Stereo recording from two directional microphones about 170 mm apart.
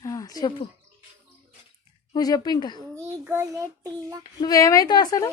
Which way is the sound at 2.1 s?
20° left (ahead or behind).